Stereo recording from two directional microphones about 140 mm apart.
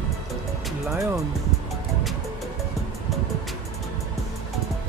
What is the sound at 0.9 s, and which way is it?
Speech, 20° right (ahead or behind).